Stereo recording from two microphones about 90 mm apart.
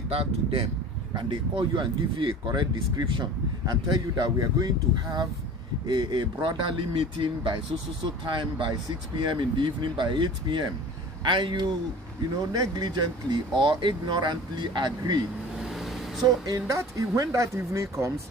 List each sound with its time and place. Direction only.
0.1 s speech: 90° right
1.1 s speech: 60° right (ahead or behind); by 5.2 s 45° right (ahead or behind)
5.9 s speech: 55° right (ahead or behind)
12.4 s speech: 45° right (ahead or behind)
15.5 s vehicle: 5° right (ahead or behind)
16.4 s speech: 40° right (ahead or behind)